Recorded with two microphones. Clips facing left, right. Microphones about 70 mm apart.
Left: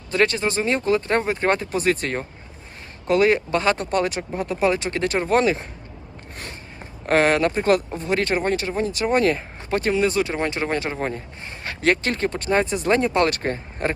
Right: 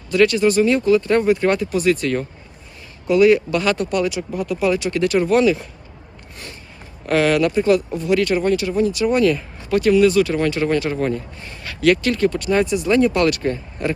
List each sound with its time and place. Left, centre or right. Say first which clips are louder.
0.1 s speech: right 6 dB; left
6.3 s a sound: left 1 dB; left
7.1 s speech: right 2 dB; left
7.9 s speech: right 4 dB; left